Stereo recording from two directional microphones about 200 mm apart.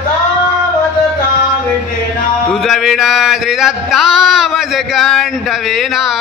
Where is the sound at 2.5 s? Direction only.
Centre (ahead or behind).